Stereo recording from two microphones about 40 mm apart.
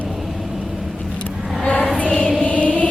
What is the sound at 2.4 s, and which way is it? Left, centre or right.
Music, left.